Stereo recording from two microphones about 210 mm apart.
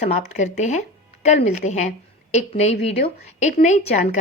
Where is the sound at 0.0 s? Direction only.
35° left (ahead or behind).